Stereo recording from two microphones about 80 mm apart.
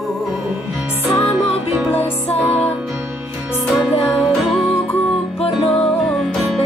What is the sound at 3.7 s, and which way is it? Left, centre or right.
Music, centre.